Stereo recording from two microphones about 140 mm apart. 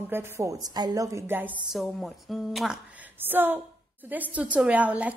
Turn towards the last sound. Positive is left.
turn(degrees=-10)  # may be behind; listen again after turning